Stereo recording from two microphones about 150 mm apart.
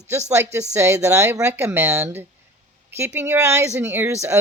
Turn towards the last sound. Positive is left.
turn(degrees=-15)  # may be behind; listen again after turning